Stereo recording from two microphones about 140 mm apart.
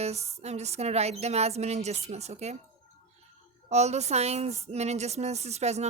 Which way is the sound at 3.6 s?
50° right (ahead or behind).